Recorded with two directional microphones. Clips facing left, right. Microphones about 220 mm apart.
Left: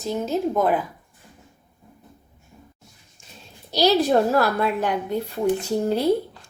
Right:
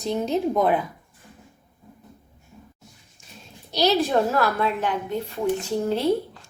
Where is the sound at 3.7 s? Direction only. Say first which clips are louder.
Left 3 dB; 35° left (ahead or behind).